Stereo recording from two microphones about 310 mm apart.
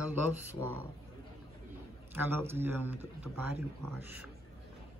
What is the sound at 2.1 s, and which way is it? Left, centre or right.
Speech, centre.